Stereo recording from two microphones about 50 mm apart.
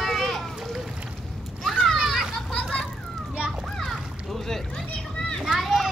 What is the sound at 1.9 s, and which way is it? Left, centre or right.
Children playing, centre.